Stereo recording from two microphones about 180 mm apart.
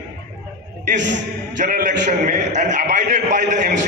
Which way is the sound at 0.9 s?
80° right.